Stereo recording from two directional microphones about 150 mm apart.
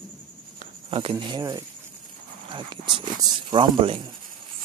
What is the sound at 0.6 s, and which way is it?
Speech, 40° right (ahead or behind).